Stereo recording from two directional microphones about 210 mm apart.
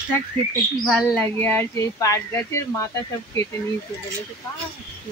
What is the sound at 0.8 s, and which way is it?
Speech, 5° left (ahead or behind).